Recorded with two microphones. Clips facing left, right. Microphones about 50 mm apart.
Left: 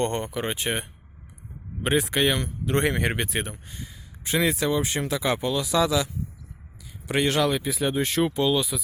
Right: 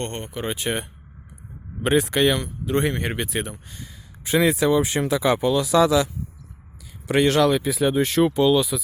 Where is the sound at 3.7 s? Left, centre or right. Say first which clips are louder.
Even; centre.